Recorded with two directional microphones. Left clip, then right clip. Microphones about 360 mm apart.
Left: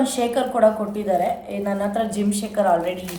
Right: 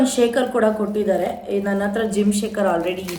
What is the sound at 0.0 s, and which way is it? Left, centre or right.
A woman's voice, centre.